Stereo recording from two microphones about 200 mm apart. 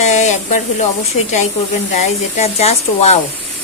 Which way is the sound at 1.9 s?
35° left (ahead or behind).